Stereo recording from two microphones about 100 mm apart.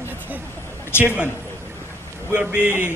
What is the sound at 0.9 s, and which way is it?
Speech, 25° left (ahead or behind).